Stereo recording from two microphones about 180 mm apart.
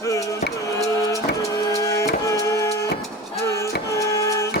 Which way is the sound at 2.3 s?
15° left (ahead or behind).